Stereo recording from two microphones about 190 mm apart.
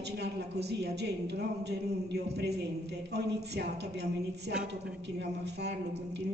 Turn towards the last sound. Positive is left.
turn(degrees=-60)  # may be behind; listen again after turning